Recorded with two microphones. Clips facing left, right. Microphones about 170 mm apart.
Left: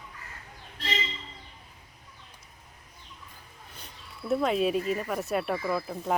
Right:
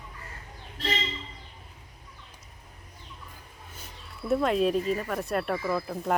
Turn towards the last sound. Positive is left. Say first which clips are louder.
# right 1 dB
turn(degrees=0)  # may be behind; listen again after turning